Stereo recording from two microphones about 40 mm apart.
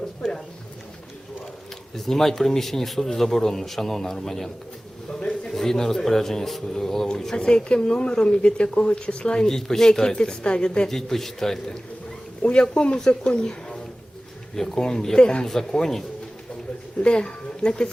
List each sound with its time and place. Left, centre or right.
0.2 s speech: centre
2.0 s speech: centre
5.2 s a sound: centre
5.5 s speech: centre
10.8 s speech: centre
12.4 s speech: left
15.4 s speech: centre
17.0 s speech: left